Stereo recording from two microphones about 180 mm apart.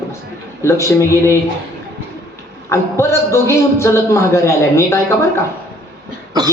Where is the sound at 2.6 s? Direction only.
15° left (ahead or behind).